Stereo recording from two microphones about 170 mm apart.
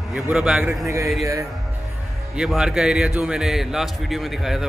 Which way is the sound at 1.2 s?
15° right (ahead or behind).